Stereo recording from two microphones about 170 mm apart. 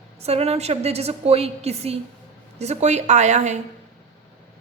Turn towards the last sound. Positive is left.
turn(degrees=-45)  # may be behind; listen again after turning